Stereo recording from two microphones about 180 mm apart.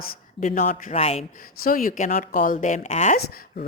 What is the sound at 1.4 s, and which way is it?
Speech, 50° left (ahead or behind).